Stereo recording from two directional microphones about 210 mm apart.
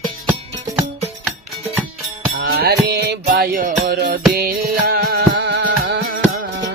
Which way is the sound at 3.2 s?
40° right (ahead or behind).